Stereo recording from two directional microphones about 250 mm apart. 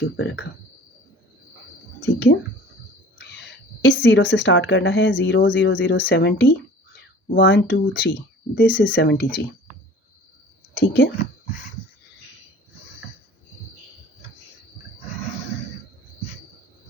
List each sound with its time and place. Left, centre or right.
2.0 s speech: left
10.8 s speech: left